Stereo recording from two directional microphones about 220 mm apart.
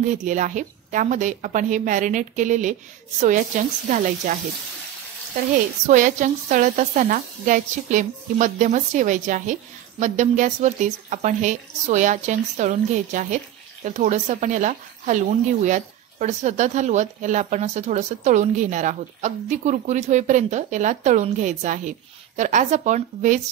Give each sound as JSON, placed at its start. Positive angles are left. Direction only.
{"t": 0.0, "sound": "speech", "side_deg": -35}
{"t": 5.9, "sound": "speech", "side_deg": -35}